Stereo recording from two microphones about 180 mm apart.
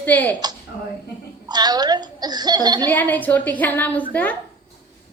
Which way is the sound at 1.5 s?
20° right (ahead or behind).